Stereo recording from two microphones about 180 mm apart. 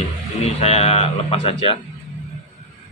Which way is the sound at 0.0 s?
35° left (ahead or behind).